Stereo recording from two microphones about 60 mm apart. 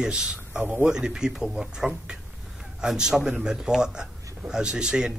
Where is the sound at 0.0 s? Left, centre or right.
Centre.